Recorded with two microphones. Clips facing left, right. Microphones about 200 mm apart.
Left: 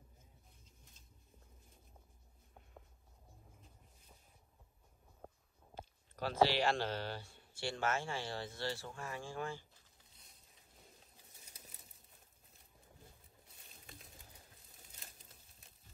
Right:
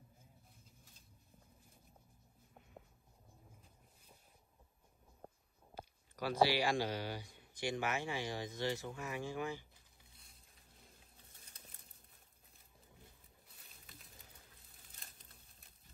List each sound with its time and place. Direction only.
5.2 s a sound: centre (ahead or behind)
5.8 s speech: 10° right (ahead or behind)
15.0 s crumpling: centre (ahead or behind)